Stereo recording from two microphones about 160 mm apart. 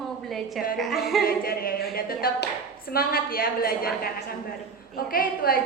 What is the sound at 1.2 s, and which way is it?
A woman's voice, 70° left (ahead or behind).